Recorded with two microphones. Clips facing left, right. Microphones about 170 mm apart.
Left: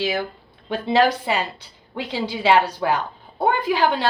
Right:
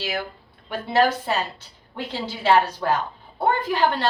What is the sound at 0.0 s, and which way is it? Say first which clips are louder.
A woman's voice: left 5 dB; 20° left (ahead or behind).